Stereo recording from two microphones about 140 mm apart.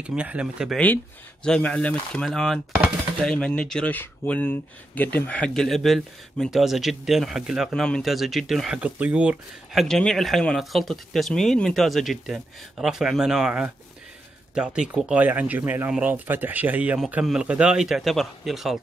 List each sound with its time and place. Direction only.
0.0 s speech: 10° right (ahead or behind)
1.4 s speech: 5° left (ahead or behind)
9.8 s speech: 5° left (ahead or behind)